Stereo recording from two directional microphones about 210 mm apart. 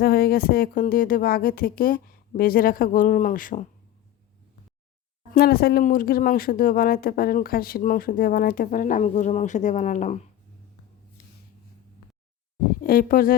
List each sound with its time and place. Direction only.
0.0 s speech: 45° left (ahead or behind)
5.3 s speech: 45° left (ahead or behind)
12.8 s speech: 45° left (ahead or behind)